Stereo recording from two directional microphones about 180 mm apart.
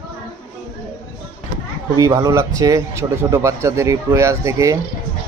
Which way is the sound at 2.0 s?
20° right (ahead or behind).